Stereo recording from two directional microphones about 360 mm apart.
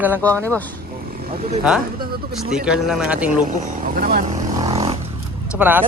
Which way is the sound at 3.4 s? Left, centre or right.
Right.